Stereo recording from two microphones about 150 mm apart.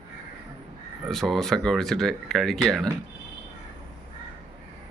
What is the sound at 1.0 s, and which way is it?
Speech, centre (ahead or behind).